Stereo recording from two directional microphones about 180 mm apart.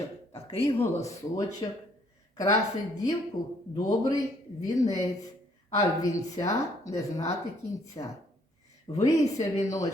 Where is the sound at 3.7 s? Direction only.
20° left (ahead or behind).